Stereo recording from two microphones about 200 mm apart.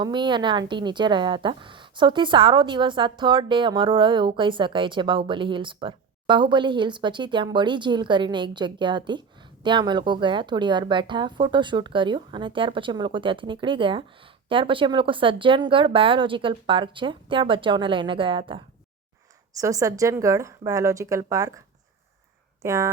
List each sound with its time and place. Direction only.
0.0 s a woman's voice: 25° right (ahead or behind)
22.6 s speech: 15° right (ahead or behind)